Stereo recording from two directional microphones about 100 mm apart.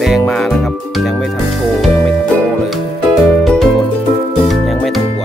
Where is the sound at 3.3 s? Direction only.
Centre (ahead or behind).